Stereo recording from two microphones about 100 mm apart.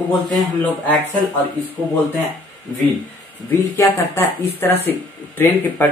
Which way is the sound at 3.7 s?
25° left (ahead or behind).